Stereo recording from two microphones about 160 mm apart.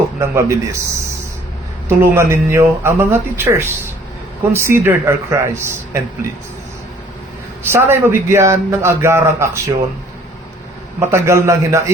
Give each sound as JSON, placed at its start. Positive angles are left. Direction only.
{"t": 0.2, "sound": "a man's voice", "side_deg": -20}
{"t": 1.9, "sound": "a man's voice", "side_deg": -15}
{"t": 7.6, "sound": "a man's voice", "side_deg": -15}
{"t": 11.0, "sound": "a man's voice", "side_deg": -15}